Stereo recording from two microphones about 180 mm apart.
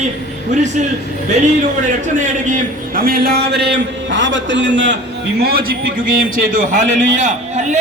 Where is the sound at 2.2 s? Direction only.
45° right (ahead or behind).